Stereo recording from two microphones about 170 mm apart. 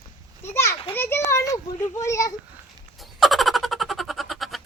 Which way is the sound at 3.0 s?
Centre (ahead or behind).